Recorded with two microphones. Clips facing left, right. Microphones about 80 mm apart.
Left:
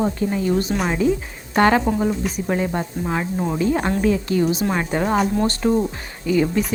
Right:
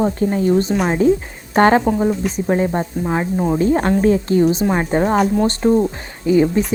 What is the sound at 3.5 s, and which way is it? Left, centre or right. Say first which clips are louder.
Speech: right 4 dB; right.